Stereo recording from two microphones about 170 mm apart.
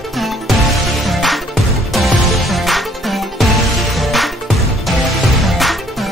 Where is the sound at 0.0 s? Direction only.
Centre (ahead or behind).